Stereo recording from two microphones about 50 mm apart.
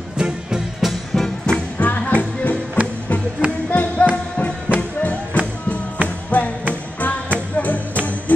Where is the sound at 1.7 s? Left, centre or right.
Left.